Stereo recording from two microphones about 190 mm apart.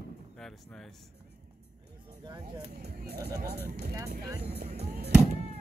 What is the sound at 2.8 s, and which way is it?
Speech, 55° right (ahead or behind).